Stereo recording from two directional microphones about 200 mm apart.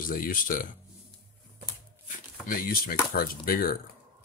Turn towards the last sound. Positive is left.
turn(degrees=45)  # may be behind; listen again after turning